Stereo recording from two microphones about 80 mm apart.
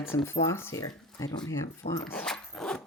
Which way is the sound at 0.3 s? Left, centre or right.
Left.